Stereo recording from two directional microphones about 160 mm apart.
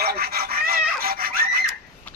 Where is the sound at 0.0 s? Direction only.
75° right (ahead or behind).